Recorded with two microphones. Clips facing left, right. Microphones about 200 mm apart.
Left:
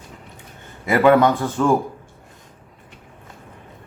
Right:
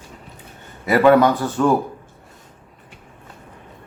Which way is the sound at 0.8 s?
15° left (ahead or behind).